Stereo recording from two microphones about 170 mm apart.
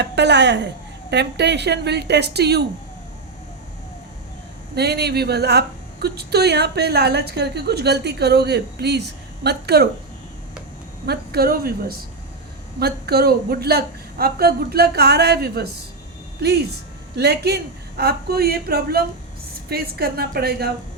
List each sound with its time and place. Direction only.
0.0 s a woman's voice: 90° right
4.7 s a woman's voice: 70° right (ahead or behind)
11.0 s a woman's voice: 70° right (ahead or behind)